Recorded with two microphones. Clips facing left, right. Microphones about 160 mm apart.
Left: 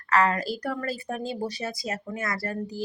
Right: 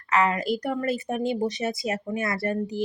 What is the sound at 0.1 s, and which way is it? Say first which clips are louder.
Speech: right 1 dB; 20° right (ahead or behind).